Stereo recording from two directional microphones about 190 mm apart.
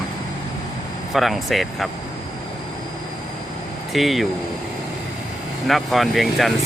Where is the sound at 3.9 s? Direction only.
Centre (ahead or behind).